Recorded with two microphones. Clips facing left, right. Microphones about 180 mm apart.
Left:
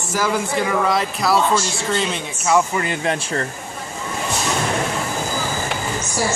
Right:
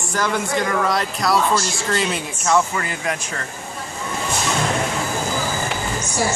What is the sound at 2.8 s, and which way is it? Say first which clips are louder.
Speech: left 3 dB; 25° left (ahead or behind).